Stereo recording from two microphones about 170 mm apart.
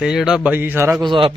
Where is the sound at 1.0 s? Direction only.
30° right (ahead or behind).